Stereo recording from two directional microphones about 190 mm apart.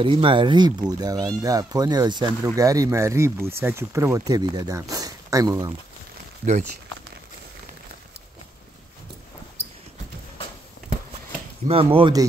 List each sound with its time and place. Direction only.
0.0 s speech: 25° right (ahead or behind)
11.6 s speech: 30° right (ahead or behind)